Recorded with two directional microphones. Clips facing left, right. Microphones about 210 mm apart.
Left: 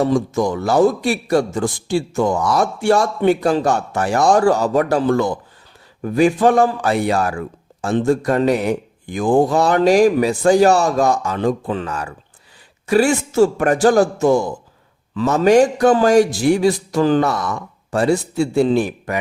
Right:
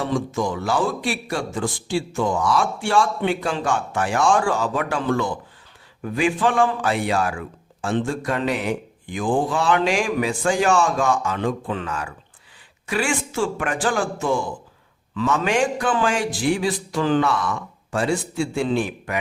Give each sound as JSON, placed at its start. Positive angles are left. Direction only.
{"t": 0.0, "sound": "speech", "side_deg": 40}